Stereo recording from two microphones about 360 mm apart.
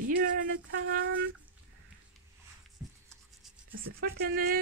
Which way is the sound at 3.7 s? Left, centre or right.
Right.